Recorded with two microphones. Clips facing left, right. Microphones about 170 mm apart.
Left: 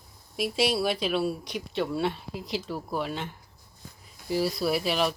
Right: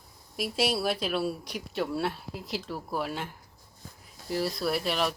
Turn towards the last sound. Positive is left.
turn(degrees=0)  # may be behind; listen again after turning